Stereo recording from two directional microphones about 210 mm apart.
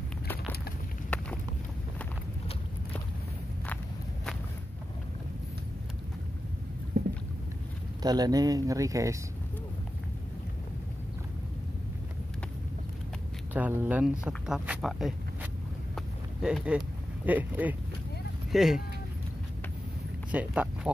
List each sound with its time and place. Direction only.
8.0 s speech: 20° right (ahead or behind)
13.5 s speech: 10° right (ahead or behind)
16.4 s speech: 5° right (ahead or behind)
20.2 s speech: 5° right (ahead or behind)